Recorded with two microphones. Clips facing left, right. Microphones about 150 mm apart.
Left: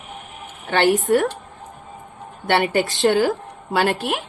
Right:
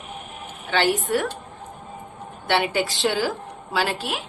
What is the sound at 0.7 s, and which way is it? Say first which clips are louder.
Speech: left 5 dB; 50° left (ahead or behind).